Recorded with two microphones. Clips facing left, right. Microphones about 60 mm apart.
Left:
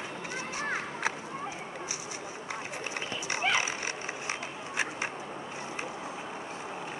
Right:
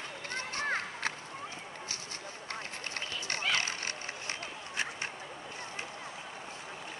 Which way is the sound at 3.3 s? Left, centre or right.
Centre.